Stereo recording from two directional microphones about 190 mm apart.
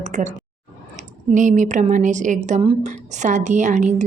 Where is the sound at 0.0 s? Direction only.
40° right (ahead or behind).